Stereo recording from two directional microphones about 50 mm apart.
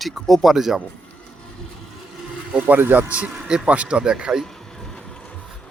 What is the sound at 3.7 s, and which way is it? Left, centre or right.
Speech, right.